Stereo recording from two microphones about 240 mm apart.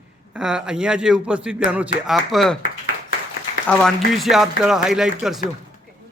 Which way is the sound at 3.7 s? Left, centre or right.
Centre.